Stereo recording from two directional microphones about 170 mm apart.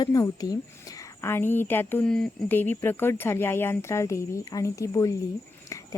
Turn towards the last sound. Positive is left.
turn(degrees=20)  # may be behind; listen again after turning